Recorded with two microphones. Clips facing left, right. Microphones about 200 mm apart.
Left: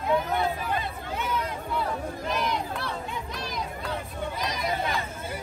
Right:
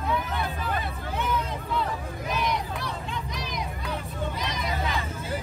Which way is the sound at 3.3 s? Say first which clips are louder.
Even; 15° right (ahead or behind).